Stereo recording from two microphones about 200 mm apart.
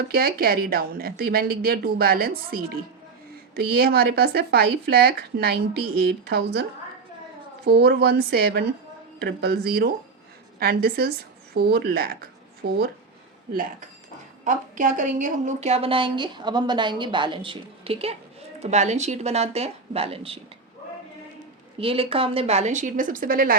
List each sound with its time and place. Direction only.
0.1 s a woman's voice: 50° right (ahead or behind); by 20.4 s 30° right (ahead or behind)
21.8 s a woman's voice: 30° right (ahead or behind); by 23.6 s 45° right (ahead or behind)